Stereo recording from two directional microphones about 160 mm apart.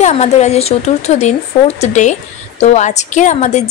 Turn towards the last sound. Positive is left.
turn(degrees=45)  # may be behind; listen again after turning